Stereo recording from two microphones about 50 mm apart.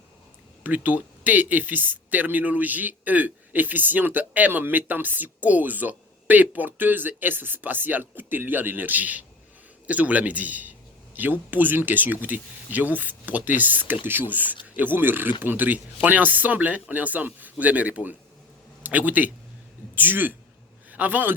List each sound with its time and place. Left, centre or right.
0.6 s a man's voice: right